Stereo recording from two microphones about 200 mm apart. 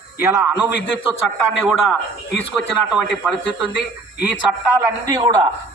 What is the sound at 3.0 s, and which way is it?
Speech, 5° right (ahead or behind).